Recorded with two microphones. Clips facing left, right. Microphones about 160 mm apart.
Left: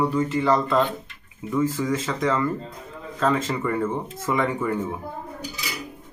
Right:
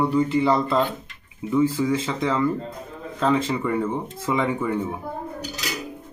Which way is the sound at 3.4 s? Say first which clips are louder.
Right 1 dB; 10° right (ahead or behind).